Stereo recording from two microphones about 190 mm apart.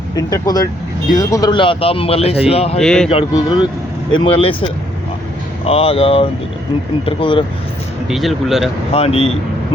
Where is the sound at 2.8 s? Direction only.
5° left (ahead or behind).